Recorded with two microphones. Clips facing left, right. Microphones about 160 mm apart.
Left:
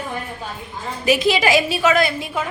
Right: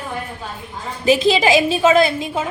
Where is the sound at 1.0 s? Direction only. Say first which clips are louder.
Right 3 dB; 25° right (ahead or behind).